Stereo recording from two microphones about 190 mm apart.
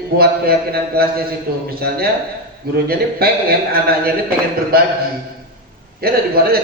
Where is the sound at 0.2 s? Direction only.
55° right (ahead or behind).